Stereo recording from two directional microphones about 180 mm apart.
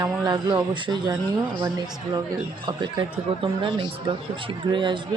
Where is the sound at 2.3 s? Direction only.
25° right (ahead or behind).